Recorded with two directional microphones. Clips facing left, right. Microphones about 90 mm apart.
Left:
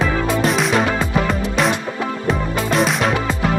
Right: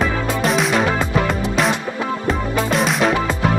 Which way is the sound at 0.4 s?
Centre (ahead or behind).